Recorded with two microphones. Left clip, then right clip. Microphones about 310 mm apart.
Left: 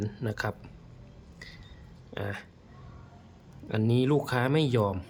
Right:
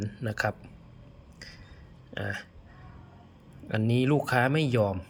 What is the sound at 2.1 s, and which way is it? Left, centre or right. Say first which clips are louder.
Speech: right 2 dB; centre.